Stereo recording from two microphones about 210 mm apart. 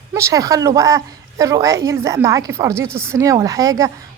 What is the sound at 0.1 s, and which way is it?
A woman's voice, 15° right (ahead or behind).